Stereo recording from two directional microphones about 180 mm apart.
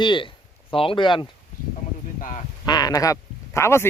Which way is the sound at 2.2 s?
45° left (ahead or behind).